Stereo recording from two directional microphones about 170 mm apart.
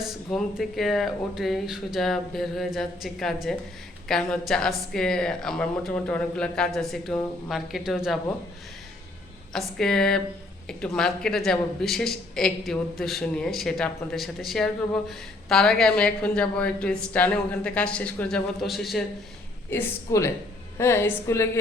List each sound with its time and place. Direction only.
0.0 s a woman's voice: centre (ahead or behind)
9.5 s a woman's voice: 5° left (ahead or behind)
19.7 s a woman's voice: 15° left (ahead or behind)